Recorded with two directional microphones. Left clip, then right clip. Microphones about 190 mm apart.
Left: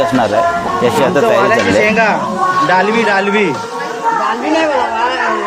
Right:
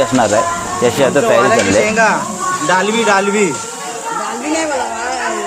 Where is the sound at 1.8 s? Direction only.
20° right (ahead or behind).